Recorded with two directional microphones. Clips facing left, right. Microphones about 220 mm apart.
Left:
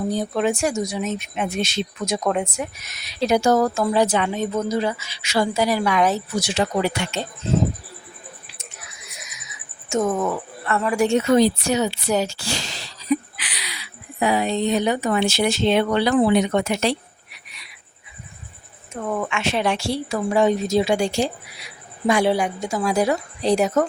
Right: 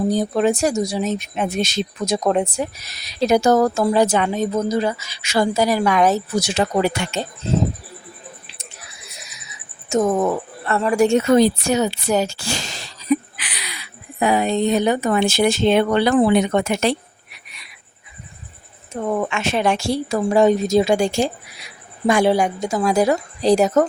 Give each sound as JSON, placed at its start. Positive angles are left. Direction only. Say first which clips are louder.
{"t": 0.1, "sound": "speech", "louder": "right 4 dB", "side_deg": -40}
{"t": 8.4, "sound": "a sound", "louder": "right 1 dB", "side_deg": -35}
{"t": 10.7, "sound": "speech", "louder": "right 3 dB", "side_deg": -35}
{"t": 18.9, "sound": "speech", "louder": "right 4 dB", "side_deg": -25}
{"t": 19.3, "sound": "speech", "louder": "right 2 dB", "side_deg": -45}